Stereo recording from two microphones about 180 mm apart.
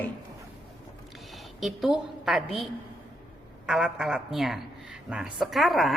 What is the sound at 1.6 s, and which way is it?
Speech, centre (ahead or behind).